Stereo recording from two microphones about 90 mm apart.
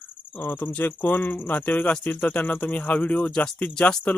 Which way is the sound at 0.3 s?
20° left (ahead or behind).